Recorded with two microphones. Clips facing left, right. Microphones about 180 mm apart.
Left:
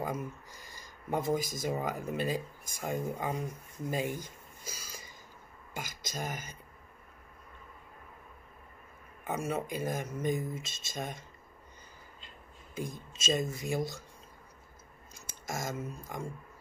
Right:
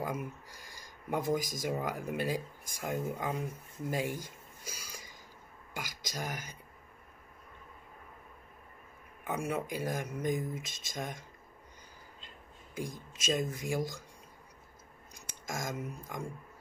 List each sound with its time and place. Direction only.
0.0 s speech: 10° right (ahead or behind)
3.3 s speech: 15° left (ahead or behind)
3.9 s a sound: 10° right (ahead or behind)
6.0 s speech: 15° right (ahead or behind)
9.2 s speech: 10° right (ahead or behind)
12.7 s speech: 10° right (ahead or behind)
15.1 s speech: 15° right (ahead or behind)